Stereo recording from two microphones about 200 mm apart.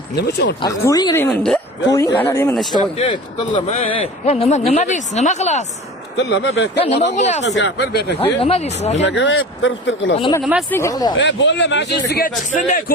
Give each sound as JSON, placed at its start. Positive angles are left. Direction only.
{"t": 0.2, "sound": "speech", "side_deg": 55}
{"t": 0.6, "sound": "a woman's voice", "side_deg": 20}
{"t": 3.0, "sound": "a man's voice", "side_deg": 25}
{"t": 6.1, "sound": "speech", "side_deg": 60}
{"t": 6.8, "sound": "a man's voice", "side_deg": 30}
{"t": 7.4, "sound": "speech", "side_deg": 60}
{"t": 8.4, "sound": "a man's voice", "side_deg": 30}
{"t": 9.0, "sound": "speech", "side_deg": 65}
{"t": 10.7, "sound": "a woman's voice", "side_deg": 15}
{"t": 11.2, "sound": "speech", "side_deg": 65}
{"t": 12.0, "sound": "a man's voice", "side_deg": 50}
{"t": 12.5, "sound": "a man's voice", "side_deg": 40}